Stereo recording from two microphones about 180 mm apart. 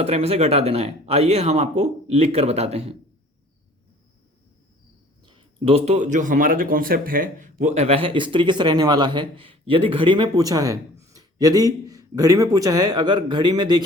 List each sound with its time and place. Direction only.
0.0 s speech: 35° right (ahead or behind)
5.2 s speech: 25° right (ahead or behind)